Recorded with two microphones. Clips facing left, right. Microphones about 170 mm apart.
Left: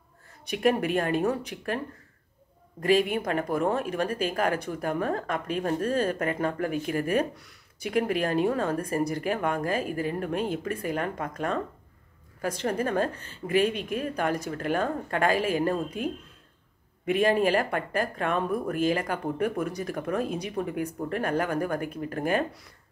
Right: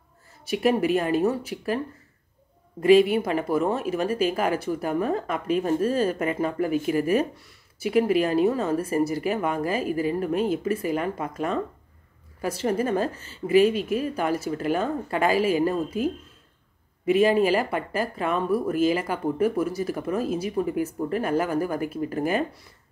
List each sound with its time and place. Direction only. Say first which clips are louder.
0.7 s speech: right 4 dB; 5° right (ahead or behind)
2.8 s a woman's voice: right 6 dB; 45° left (ahead or behind)
3.2 s speech: right 3 dB; 5° right (ahead or behind)